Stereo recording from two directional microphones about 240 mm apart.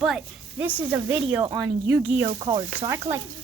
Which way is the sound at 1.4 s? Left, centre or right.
Centre.